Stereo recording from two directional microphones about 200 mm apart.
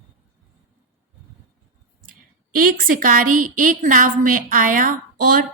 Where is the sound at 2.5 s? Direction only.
45° right (ahead or behind).